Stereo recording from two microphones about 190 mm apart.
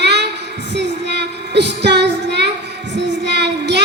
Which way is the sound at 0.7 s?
65° right (ahead or behind).